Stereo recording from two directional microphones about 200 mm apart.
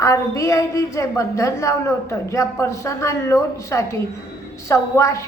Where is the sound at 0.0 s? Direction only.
15° left (ahead or behind).